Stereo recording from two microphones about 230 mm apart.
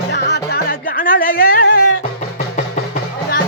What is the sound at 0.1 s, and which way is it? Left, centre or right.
Music, left.